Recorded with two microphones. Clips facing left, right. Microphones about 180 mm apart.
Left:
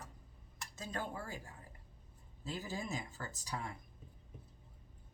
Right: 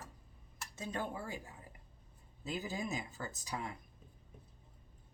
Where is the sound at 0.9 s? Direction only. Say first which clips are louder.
Right 2 dB; 15° right (ahead or behind).